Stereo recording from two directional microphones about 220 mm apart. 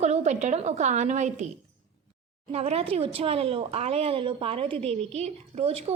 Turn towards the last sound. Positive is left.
turn(degrees=-30)  # may be behind; listen again after turning